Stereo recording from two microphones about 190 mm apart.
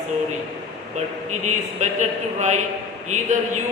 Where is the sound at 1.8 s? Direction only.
40° right (ahead or behind).